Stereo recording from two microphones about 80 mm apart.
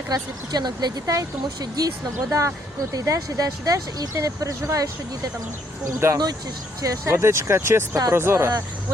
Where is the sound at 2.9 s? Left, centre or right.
Right.